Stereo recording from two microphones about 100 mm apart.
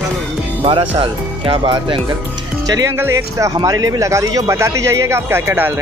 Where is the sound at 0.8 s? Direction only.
60° right (ahead or behind).